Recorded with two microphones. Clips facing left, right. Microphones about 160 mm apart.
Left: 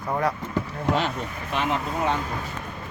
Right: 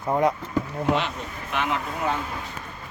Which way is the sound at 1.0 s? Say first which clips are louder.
Left 2 dB; 35° left (ahead or behind).